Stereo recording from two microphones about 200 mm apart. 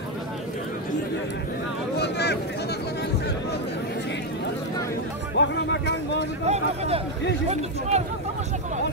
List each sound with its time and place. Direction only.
2.0 s a sound: 55° left (ahead or behind)
5.4 s music: 65° left (ahead or behind)
6.4 s speech: 35° right (ahead or behind)